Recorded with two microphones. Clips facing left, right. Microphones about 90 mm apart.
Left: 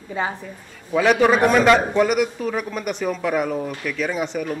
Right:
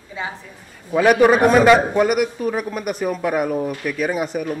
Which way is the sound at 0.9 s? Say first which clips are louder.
Right 3 dB; 10° right (ahead or behind).